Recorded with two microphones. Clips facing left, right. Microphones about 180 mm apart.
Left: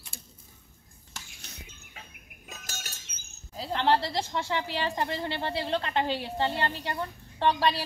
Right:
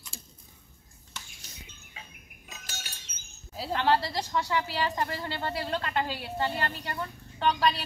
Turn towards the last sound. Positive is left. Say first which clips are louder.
# left 1 dB
turn(degrees=30)  # may be behind; listen again after turning